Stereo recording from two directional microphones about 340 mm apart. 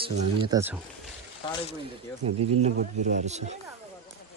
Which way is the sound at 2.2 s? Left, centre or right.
Centre.